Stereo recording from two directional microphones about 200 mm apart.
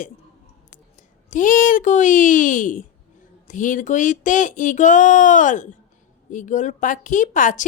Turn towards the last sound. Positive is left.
turn(degrees=40)  # may be behind; listen again after turning